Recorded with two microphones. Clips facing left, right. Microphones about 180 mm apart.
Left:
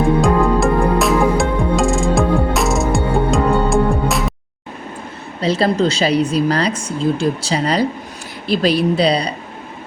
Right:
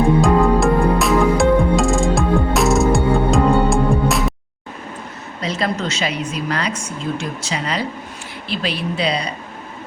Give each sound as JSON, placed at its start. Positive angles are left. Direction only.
{"t": 0.2, "sound": "music", "side_deg": 0}
{"t": 5.4, "sound": "a woman's voice", "side_deg": 30}